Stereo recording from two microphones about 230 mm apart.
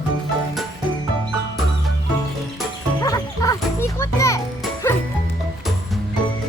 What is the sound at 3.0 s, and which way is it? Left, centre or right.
Music, centre.